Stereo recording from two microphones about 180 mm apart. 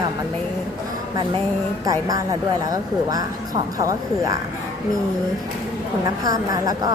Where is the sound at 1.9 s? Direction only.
20° right (ahead or behind).